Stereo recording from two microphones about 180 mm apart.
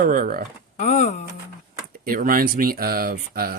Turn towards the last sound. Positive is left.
turn(degrees=-55)  # may be behind; listen again after turning